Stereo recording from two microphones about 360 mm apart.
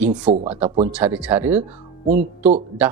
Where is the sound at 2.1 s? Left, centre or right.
Centre.